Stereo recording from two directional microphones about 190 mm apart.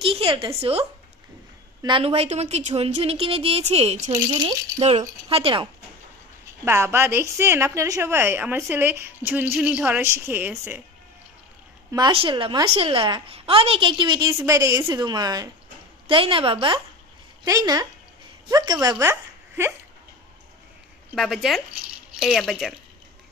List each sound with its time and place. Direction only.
0.0 s a sound: 30° right (ahead or behind)
0.6 s a woman's voice: 30° right (ahead or behind)
6.6 s a woman's voice: 15° right (ahead or behind)
11.9 s a woman's voice: 25° right (ahead or behind)
21.1 s speech: centre (ahead or behind)